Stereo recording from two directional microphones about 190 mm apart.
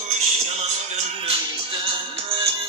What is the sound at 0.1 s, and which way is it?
Music, 35° right (ahead or behind).